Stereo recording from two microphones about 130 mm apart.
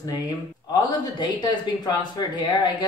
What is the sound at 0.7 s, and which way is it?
Speech, 35° left (ahead or behind).